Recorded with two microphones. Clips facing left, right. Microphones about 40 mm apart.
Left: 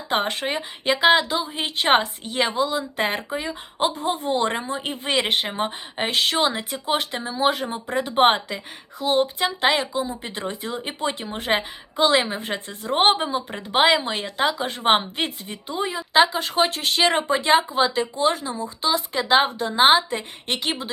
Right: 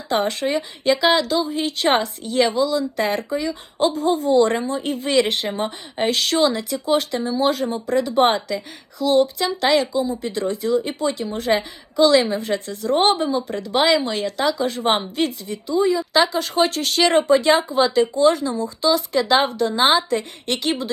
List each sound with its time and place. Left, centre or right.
0.1 s speech: left
4.5 s speech: left
16.1 s speech: left